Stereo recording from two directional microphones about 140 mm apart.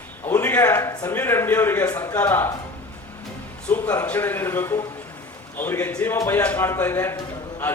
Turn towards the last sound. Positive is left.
turn(degrees=15)  # may be behind; listen again after turning